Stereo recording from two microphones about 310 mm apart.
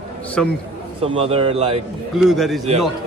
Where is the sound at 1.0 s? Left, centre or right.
Centre.